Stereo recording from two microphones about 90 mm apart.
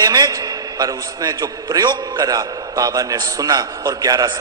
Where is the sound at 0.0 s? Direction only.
45° right (ahead or behind).